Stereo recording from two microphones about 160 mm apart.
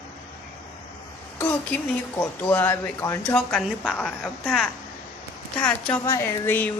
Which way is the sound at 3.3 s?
5° left (ahead or behind).